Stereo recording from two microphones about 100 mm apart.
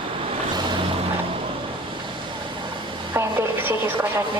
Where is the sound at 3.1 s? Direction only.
25° right (ahead or behind).